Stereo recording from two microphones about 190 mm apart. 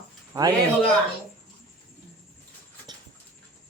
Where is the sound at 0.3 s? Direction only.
20° right (ahead or behind).